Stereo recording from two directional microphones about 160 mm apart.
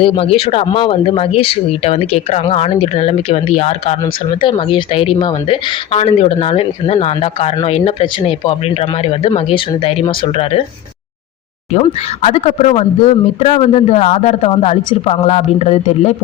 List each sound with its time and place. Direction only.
0.0 s speech: 35° left (ahead or behind)
4.0 s speech: 30° left (ahead or behind)
11.7 s speech: 45° left (ahead or behind)